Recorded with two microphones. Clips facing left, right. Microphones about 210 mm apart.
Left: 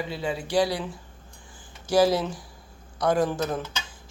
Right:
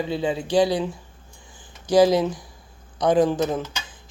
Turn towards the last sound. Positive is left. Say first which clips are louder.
# right 4 dB
turn(degrees=-15)  # may be behind; listen again after turning